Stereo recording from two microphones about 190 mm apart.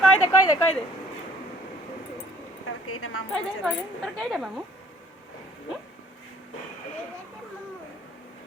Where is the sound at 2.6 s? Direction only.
90° left.